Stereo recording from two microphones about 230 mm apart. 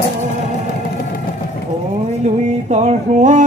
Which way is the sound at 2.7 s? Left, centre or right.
Right.